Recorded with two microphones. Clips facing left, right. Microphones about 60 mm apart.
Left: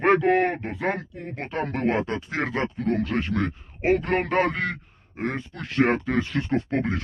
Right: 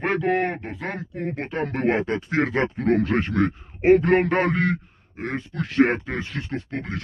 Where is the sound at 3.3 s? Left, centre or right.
Centre.